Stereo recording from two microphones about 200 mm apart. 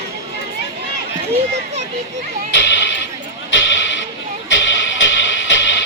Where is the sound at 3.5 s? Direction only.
70° left (ahead or behind).